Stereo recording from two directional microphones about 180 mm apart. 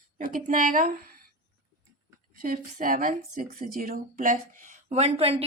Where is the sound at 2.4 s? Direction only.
55° right (ahead or behind).